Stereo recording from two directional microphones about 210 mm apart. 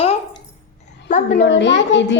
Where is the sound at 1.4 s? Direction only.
55° left (ahead or behind).